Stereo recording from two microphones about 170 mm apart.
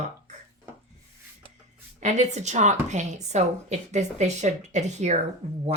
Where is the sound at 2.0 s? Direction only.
45° right (ahead or behind).